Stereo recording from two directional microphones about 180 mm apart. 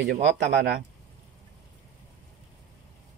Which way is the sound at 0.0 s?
75° right (ahead or behind).